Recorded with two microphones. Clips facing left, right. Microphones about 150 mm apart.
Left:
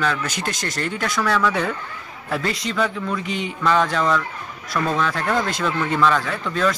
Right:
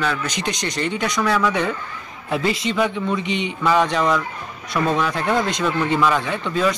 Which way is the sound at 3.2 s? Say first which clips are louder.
Right 3 dB; 45° left (ahead or behind).